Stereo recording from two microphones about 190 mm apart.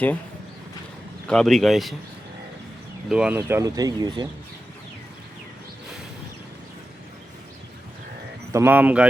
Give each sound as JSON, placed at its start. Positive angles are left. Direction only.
{"t": 1.3, "sound": "speech", "side_deg": 0}
{"t": 3.1, "sound": "speech", "side_deg": -5}
{"t": 8.5, "sound": "speech", "side_deg": -10}